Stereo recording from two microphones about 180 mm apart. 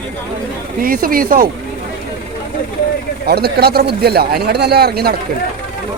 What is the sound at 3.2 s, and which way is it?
Speech, 60° right (ahead or behind).